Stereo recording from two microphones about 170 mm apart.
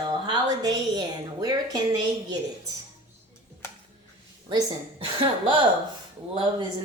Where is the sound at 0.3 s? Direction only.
25° right (ahead or behind).